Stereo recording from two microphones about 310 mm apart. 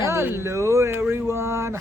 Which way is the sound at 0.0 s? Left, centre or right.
Centre.